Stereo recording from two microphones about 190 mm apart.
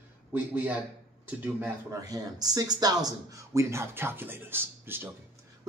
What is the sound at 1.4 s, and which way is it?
Speech, 15° right (ahead or behind).